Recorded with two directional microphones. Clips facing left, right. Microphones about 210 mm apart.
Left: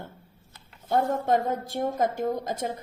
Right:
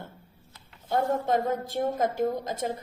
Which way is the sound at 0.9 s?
50° left (ahead or behind).